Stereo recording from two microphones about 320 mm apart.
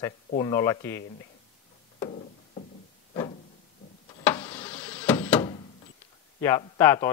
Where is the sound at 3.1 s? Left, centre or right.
Centre.